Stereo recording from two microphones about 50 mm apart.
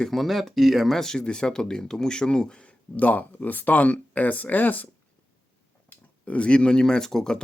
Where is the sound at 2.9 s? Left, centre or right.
Left.